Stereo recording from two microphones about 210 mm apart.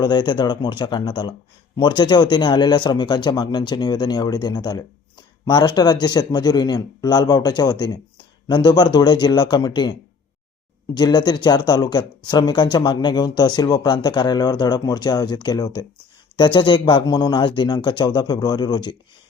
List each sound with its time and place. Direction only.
0.0 s speech: 20° left (ahead or behind)
10.9 s speech: 20° left (ahead or behind)